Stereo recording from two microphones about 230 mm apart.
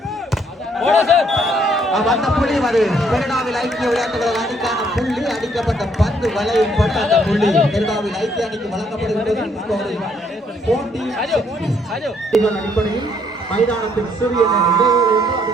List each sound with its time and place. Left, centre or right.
0.8 s speech: centre
11.2 s speech: centre
14.3 s speech: centre